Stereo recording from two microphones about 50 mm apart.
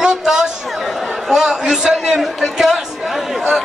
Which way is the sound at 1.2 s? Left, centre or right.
Centre.